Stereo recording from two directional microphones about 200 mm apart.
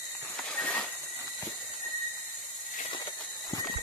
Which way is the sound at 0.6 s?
5° left (ahead or behind).